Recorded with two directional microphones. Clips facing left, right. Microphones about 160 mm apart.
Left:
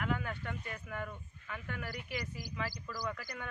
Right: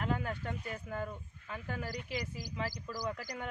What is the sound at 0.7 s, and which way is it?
Speech, 25° right (ahead or behind).